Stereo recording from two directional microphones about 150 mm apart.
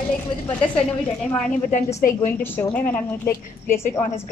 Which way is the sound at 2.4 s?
15° left (ahead or behind).